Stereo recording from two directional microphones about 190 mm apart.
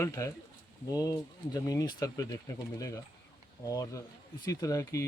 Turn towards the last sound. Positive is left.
turn(degrees=15)  # may be behind; listen again after turning